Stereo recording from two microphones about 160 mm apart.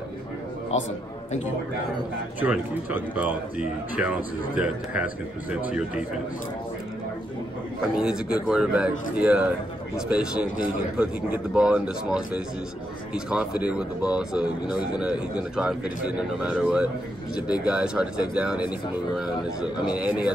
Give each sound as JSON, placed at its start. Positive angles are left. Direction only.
{"t": 2.4, "sound": "speech", "side_deg": -10}
{"t": 7.9, "sound": "speech", "side_deg": -5}